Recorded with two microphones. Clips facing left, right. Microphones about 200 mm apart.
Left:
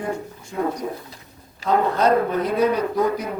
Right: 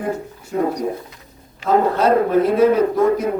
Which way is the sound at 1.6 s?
35° left (ahead or behind).